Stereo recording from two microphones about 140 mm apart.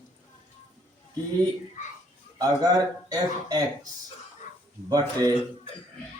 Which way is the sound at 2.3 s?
25° right (ahead or behind).